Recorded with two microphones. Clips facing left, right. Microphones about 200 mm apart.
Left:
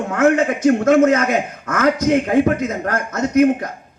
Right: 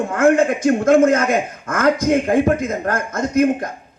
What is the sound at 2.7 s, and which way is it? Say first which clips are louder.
Speech: even; 55° left (ahead or behind).